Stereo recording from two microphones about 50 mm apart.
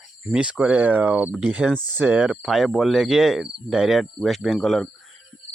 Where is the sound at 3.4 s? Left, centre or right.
Centre.